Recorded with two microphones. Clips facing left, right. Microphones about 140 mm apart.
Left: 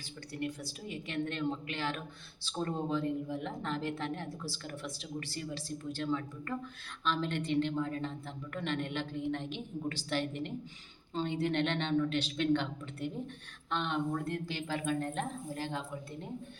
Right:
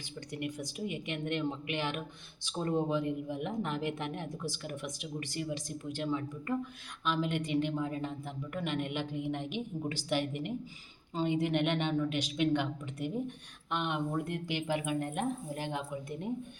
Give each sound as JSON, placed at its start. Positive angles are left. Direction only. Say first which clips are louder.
{"t": 0.3, "sound": "a woman's voice", "louder": "right 1 dB", "side_deg": -15}